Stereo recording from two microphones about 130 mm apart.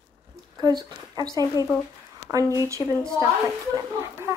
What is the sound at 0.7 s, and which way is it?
Speech, 30° right (ahead or behind).